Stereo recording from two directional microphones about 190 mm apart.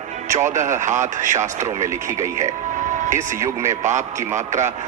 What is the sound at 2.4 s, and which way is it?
Music, 40° right (ahead or behind).